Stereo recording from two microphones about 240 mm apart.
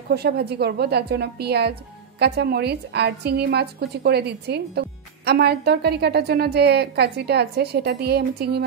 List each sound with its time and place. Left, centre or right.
0.1 s a woman's voice: right